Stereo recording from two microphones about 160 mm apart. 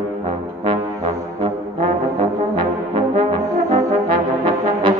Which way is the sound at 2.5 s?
30° right (ahead or behind).